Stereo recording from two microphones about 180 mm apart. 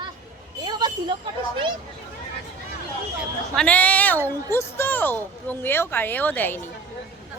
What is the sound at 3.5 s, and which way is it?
A woman's voice, 5° left (ahead or behind).